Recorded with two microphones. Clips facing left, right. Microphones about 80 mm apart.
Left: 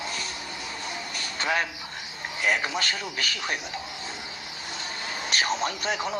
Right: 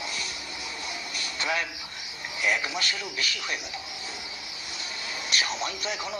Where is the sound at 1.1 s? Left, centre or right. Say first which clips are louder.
Left 3 dB; left.